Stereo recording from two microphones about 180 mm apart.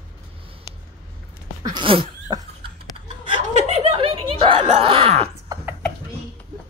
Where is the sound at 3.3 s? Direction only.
40° right (ahead or behind).